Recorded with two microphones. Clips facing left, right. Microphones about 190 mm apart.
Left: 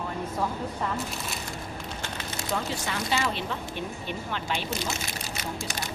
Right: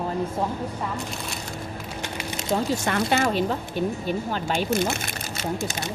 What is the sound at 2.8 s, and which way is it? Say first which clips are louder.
Speech: right 6 dB; 55° right (ahead or behind).